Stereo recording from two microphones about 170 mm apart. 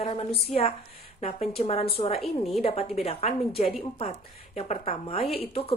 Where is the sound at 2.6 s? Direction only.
40° left (ahead or behind).